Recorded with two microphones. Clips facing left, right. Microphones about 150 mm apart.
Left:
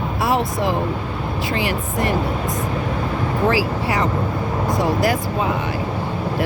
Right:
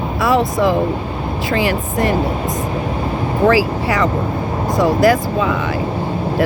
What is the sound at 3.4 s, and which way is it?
Speech, 90° right.